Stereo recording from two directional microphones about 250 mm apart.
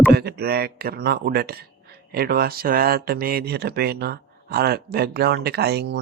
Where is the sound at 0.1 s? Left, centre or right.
Right.